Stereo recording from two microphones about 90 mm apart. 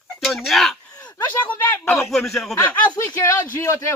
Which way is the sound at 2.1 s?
5° left (ahead or behind).